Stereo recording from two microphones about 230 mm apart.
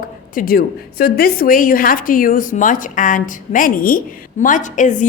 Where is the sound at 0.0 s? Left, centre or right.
Left.